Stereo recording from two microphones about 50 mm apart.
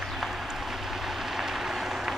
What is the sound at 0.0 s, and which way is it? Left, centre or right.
Vehicle, centre.